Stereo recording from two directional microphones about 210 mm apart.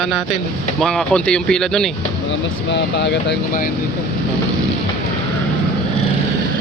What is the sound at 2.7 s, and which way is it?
Speech, 55° left (ahead or behind).